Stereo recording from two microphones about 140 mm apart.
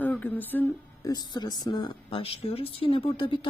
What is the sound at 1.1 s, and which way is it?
A woman's voice, 30° left (ahead or behind).